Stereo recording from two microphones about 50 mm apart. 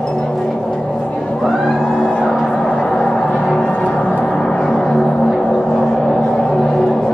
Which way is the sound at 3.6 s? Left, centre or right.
Left.